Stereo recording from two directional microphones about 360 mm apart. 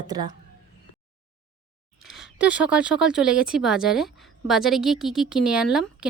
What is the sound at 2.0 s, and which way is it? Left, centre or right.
Speech, centre.